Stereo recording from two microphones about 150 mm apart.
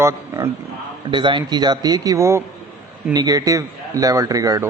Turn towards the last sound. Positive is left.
turn(degrees=-25)  # may be behind; listen again after turning